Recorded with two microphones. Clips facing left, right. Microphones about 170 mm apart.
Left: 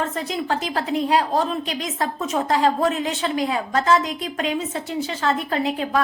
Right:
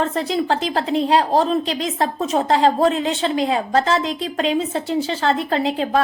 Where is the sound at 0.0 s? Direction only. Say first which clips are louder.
Right 5 dB; 30° right (ahead or behind).